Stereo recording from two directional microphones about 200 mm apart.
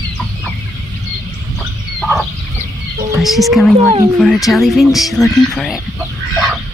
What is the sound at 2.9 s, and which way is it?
Whispering, 15° right (ahead or behind).